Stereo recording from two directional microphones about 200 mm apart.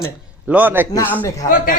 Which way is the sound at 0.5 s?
10° right (ahead or behind).